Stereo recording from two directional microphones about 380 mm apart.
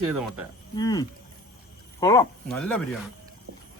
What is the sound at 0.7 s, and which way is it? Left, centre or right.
Speech, centre.